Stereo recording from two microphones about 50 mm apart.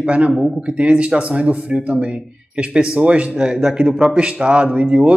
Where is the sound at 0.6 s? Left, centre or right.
Right.